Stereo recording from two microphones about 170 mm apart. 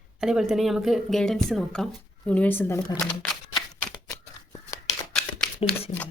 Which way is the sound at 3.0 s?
Centre (ahead or behind).